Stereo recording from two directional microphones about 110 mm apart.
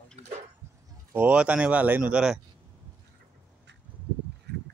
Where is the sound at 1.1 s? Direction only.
10° right (ahead or behind).